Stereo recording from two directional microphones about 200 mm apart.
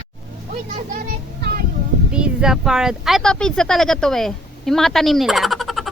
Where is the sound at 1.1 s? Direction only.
50° right (ahead or behind).